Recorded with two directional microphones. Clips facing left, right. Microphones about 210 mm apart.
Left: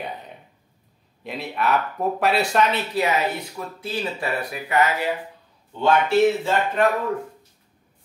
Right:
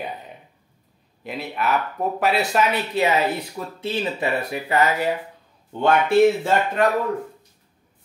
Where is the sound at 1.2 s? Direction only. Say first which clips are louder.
Even; centre (ahead or behind).